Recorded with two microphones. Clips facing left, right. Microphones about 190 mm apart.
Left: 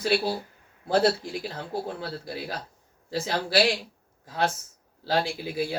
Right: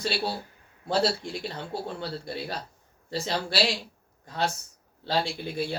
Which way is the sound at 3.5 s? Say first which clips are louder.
Left 5 dB; 55° left (ahead or behind).